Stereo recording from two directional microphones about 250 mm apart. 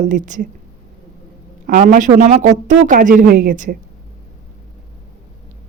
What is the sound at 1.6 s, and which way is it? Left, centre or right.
A man's voice, right.